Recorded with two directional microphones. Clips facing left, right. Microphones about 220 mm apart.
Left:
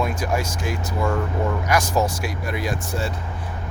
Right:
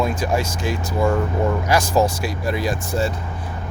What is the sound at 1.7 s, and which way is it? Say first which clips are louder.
Speech: right 3 dB; 30° right (ahead or behind).